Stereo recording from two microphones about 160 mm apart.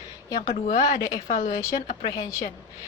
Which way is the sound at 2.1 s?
20° left (ahead or behind).